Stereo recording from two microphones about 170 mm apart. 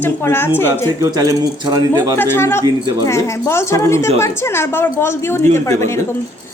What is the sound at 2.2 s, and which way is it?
A woman's voice, 15° left (ahead or behind).